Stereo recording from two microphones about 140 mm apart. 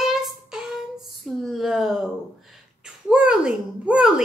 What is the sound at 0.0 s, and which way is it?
Child singing, 5° right (ahead or behind).